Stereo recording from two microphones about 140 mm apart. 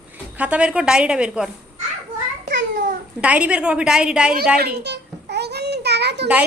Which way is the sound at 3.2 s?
10° right (ahead or behind).